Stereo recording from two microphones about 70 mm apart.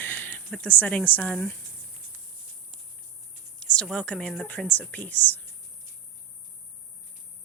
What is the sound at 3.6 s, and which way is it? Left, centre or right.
A woman's voice, centre.